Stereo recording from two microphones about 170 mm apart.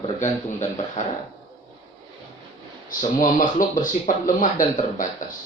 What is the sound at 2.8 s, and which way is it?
Speech, 50° left (ahead or behind).